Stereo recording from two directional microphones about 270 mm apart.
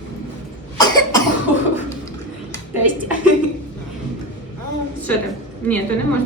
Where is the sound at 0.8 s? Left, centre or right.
Centre.